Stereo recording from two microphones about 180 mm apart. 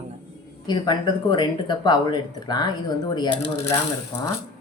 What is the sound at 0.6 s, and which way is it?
Speech, 25° left (ahead or behind).